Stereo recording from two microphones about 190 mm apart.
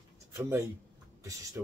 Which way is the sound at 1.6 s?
10° right (ahead or behind).